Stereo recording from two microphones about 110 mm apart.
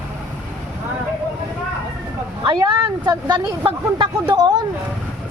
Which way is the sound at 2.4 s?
45° right (ahead or behind).